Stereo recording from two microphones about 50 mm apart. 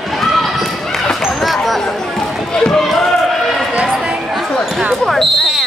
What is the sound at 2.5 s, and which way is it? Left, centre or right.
Run, centre.